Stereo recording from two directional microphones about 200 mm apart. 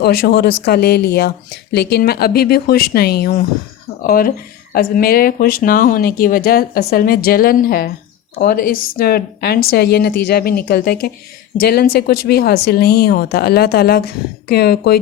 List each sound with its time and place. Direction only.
0.0 s speech: 55° left (ahead or behind)